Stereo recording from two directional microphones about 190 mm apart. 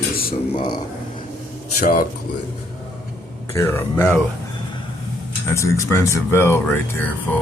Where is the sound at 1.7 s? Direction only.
45° left (ahead or behind).